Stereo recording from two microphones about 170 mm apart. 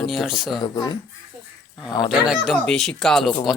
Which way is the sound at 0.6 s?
25° left (ahead or behind).